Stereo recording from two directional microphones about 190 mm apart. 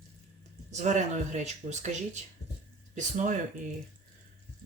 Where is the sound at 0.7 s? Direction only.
40° right (ahead or behind).